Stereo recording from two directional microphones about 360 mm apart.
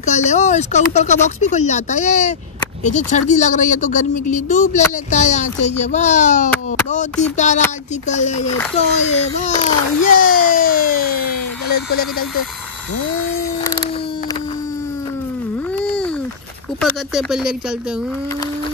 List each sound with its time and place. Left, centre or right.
0.0 s a child's voice: centre
15.7 s a sound: centre
16.8 s speech: centre